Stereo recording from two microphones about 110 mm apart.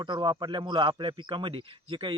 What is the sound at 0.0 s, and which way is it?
Speech, 45° right (ahead or behind).